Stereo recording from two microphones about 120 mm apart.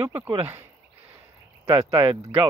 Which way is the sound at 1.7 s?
25° right (ahead or behind).